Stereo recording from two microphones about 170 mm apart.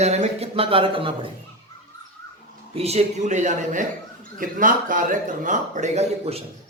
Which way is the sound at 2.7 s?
40° right (ahead or behind).